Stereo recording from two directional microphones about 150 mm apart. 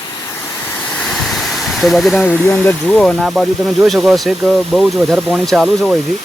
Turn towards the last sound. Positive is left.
turn(degrees=0)  # may be behind; listen again after turning